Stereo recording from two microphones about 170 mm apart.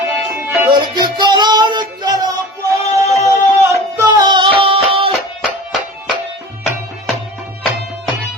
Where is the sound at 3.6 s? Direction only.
20° right (ahead or behind).